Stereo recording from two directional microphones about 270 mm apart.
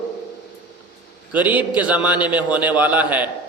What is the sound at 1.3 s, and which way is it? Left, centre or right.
A man's voice, centre.